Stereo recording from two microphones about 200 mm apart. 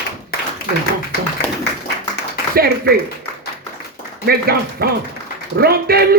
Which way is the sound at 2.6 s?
50° right (ahead or behind).